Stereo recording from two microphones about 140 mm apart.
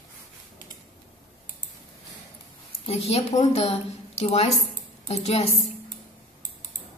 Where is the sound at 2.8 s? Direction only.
45° left (ahead or behind).